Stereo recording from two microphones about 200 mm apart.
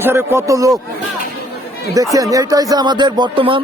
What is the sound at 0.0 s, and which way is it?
Speech, 10° right (ahead or behind).